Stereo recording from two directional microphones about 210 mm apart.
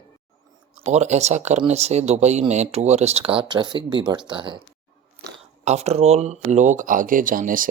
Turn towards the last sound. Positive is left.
turn(degrees=-40)  # may be behind; listen again after turning